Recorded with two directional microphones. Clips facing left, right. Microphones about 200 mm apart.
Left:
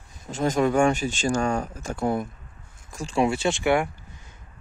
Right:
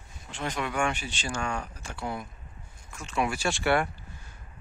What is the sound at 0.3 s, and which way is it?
Speech, 40° left (ahead or behind).